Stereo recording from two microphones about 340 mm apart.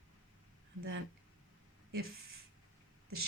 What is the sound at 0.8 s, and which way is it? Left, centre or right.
Speech, right.